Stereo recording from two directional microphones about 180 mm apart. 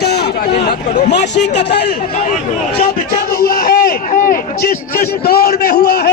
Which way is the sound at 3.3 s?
55° left (ahead or behind).